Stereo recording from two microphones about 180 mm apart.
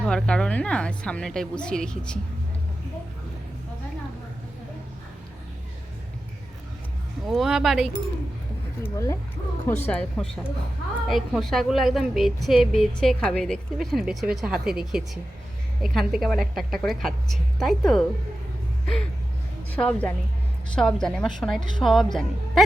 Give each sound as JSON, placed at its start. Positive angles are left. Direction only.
{"t": 0.0, "sound": "a woman's voice", "side_deg": 5}
{"t": 7.3, "sound": "a woman's voice", "side_deg": 0}
{"t": 8.8, "sound": "a woman's voice", "side_deg": 15}
{"t": 19.7, "sound": "a woman's voice", "side_deg": 5}